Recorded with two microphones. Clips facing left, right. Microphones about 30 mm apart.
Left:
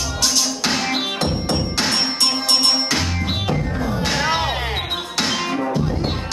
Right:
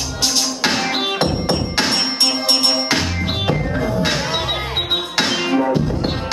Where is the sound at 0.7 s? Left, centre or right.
Centre.